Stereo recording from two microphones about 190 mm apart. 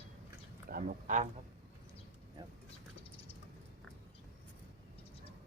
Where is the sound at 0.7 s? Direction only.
45° right (ahead or behind).